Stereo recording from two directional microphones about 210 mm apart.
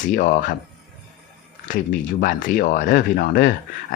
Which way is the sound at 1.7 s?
40° left (ahead or behind).